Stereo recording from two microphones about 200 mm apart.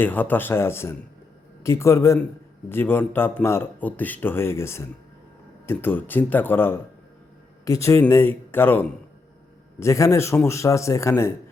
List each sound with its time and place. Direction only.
0.0 s speech: 10° left (ahead or behind)